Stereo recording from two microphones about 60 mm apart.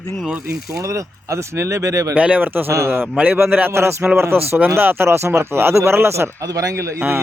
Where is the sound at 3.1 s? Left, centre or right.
Right.